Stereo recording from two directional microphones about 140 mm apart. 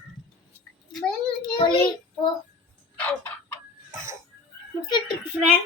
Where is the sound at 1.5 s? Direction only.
40° left (ahead or behind).